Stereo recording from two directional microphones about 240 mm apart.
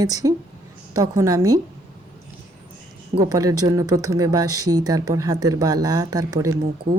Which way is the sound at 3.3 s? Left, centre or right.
Centre.